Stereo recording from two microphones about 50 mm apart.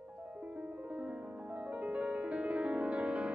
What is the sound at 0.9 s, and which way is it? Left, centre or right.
Music, right.